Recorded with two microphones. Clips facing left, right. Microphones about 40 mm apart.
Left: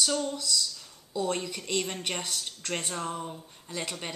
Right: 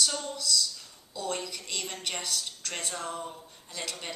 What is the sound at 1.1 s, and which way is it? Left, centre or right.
A woman's voice, left.